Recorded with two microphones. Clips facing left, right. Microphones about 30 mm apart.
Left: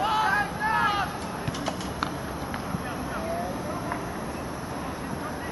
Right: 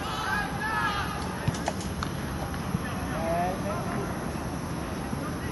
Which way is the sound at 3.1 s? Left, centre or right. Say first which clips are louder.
Right 4 dB; centre.